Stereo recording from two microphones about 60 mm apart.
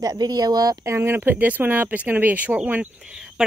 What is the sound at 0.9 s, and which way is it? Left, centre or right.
Speech, right.